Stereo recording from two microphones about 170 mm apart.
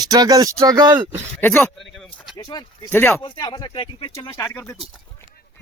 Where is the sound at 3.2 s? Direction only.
25° left (ahead or behind).